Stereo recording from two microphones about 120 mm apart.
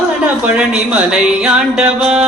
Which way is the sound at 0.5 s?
5° right (ahead or behind).